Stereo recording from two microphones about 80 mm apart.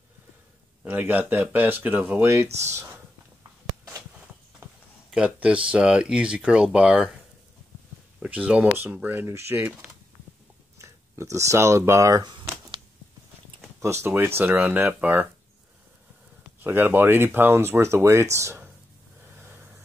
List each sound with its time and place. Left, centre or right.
0.8 s speech: right
2.2 s speech: right
5.1 s speech: centre
8.2 s speech: centre
9.6 s speech: centre
10.8 s speech: right
13.7 s speech: right
16.6 s speech: right
19.3 s a sound: right